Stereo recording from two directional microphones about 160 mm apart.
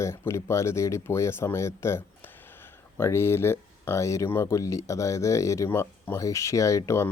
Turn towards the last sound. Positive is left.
turn(degrees=20)  # may be behind; listen again after turning